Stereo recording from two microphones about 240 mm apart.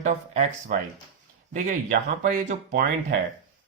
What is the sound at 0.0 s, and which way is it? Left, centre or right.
Speech, right.